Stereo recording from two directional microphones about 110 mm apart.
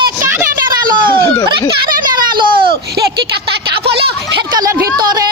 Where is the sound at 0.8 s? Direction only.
45° right (ahead or behind).